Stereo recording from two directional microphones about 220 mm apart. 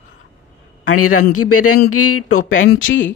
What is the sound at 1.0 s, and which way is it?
Speech, 85° left.